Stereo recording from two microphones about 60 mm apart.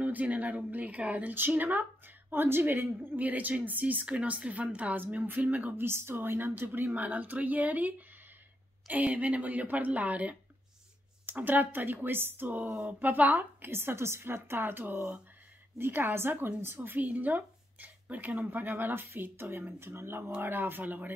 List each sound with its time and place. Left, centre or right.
0.0 s a woman's voice: right
5.9 s a woman's voice: right
12.6 s speech: centre
13.0 s speech: right
17.0 s speech: right